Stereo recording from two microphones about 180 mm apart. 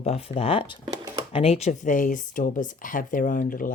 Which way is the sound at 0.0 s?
35° left (ahead or behind).